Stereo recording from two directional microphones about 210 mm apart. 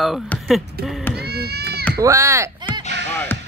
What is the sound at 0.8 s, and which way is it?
Speech, 50° right (ahead or behind).